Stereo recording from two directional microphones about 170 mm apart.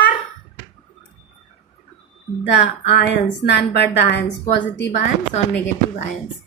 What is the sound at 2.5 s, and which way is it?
A woman's voice, 90° left.